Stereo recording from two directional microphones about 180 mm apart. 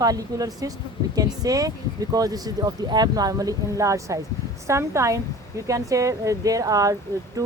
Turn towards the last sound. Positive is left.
turn(degrees=-20)  # may be behind; listen again after turning